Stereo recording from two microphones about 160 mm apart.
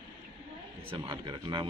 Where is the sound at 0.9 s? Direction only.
30° right (ahead or behind).